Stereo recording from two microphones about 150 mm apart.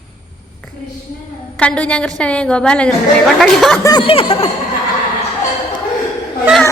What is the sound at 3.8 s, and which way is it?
Chuckle, 25° left (ahead or behind).